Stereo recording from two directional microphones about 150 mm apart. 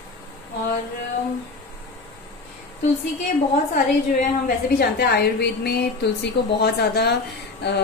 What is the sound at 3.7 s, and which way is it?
A woman's voice, 70° left (ahead or behind).